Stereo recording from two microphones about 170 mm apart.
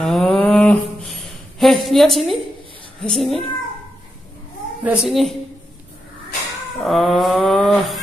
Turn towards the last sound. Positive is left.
turn(degrees=0)  # may be behind; listen again after turning